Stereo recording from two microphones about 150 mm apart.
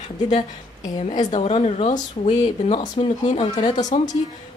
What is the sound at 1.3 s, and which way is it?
Speech, 45° left (ahead or behind).